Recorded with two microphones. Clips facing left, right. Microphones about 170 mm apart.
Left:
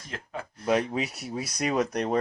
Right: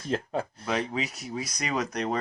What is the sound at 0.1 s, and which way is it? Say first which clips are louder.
Speech: right 9 dB; 30° right (ahead or behind).